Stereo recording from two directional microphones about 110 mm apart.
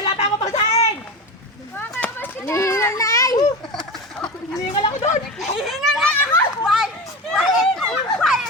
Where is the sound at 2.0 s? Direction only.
15° left (ahead or behind).